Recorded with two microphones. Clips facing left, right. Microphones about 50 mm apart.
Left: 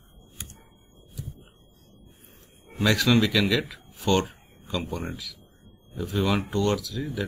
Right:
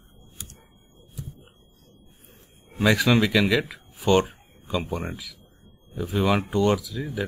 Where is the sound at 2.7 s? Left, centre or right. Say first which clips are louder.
Right 2 dB; centre.